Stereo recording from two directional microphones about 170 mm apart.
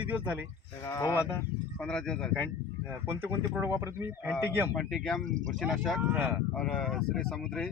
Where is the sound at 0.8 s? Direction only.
20° left (ahead or behind).